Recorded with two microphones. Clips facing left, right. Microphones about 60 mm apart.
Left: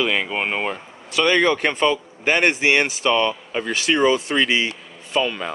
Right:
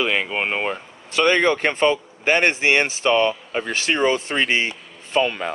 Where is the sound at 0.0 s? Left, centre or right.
Right.